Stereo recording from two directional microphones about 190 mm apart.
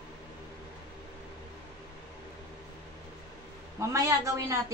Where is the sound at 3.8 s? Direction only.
15° right (ahead or behind).